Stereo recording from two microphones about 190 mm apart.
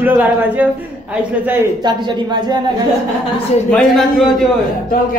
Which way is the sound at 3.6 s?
Centre (ahead or behind).